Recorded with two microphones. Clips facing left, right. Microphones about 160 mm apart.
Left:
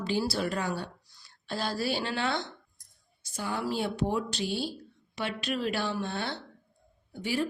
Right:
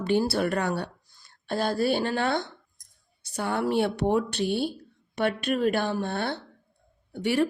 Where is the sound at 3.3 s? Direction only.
65° right (ahead or behind).